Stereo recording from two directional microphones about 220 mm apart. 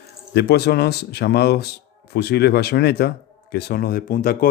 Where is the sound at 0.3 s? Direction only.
50° left (ahead or behind).